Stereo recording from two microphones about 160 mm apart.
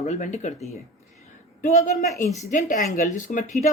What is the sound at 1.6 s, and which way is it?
A woman's voice, 45° left (ahead or behind).